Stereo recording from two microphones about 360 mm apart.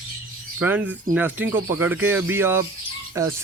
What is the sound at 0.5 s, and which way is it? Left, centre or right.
Speech, centre.